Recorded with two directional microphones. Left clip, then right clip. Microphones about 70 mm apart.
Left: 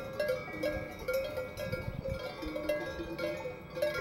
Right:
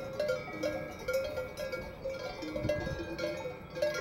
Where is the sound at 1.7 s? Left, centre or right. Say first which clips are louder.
Even; right.